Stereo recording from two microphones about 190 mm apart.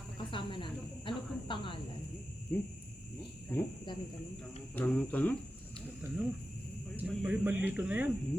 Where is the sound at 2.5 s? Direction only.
10° left (ahead or behind).